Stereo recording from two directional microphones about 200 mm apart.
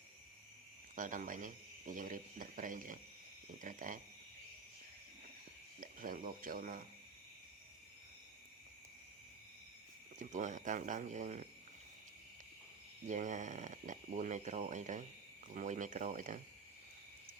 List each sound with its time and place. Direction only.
0.9 s speech: 40° right (ahead or behind)
5.8 s speech: 45° right (ahead or behind)
10.2 s speech: 40° right (ahead or behind)
13.1 s speech: 40° right (ahead or behind)